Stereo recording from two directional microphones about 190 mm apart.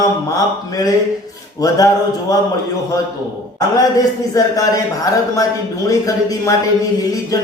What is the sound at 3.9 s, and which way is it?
Speech, 20° left (ahead or behind).